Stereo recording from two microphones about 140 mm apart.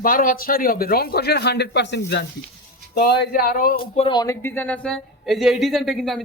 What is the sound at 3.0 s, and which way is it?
Speech, 90° left.